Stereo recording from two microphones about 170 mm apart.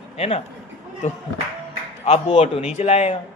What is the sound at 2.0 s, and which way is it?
A man's voice, 40° left (ahead or behind).